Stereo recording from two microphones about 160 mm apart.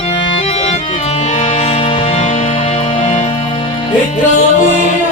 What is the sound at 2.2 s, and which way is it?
Music, 50° left (ahead or behind).